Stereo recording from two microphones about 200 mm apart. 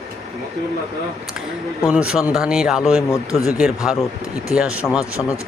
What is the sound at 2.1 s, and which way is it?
Speech, 5° right (ahead or behind).